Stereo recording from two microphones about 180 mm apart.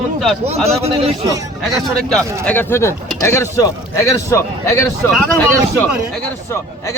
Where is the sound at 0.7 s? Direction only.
35° right (ahead or behind).